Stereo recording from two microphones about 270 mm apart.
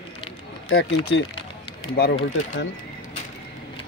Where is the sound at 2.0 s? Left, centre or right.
Left.